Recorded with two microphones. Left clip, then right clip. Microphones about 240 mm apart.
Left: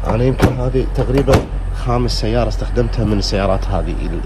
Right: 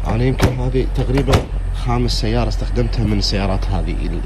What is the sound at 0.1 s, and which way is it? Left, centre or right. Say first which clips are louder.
Speech: left 3 dB; left.